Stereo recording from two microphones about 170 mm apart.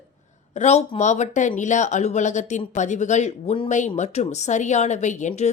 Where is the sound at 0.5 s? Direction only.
40° left (ahead or behind).